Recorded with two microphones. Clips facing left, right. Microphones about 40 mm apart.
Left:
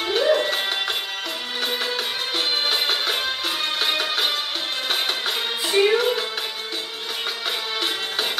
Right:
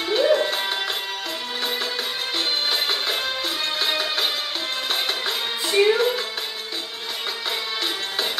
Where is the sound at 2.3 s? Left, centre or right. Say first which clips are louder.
Left 1 dB; centre.